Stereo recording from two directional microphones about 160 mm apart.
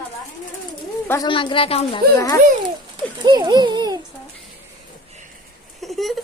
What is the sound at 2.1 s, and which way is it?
Speech, 20° left (ahead or behind).